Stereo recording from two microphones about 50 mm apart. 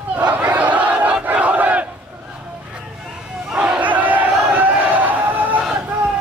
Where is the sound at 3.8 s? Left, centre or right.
Right.